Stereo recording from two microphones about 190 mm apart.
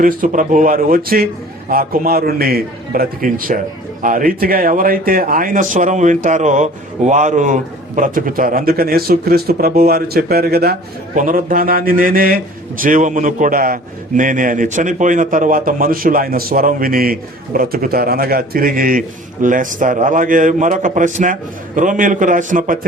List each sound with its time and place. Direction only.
0.0 s speech: 45° right (ahead or behind)